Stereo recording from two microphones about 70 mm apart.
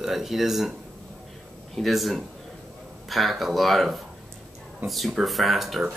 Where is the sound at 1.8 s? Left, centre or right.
Centre.